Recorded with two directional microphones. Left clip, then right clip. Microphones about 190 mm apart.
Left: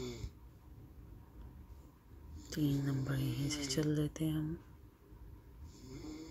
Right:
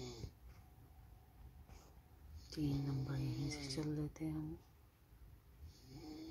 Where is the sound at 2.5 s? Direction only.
15° left (ahead or behind).